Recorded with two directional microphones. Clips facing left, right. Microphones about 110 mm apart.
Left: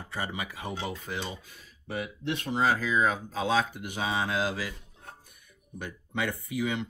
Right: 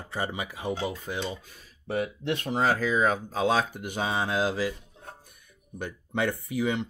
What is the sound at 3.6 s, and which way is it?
Speech, 35° right (ahead or behind).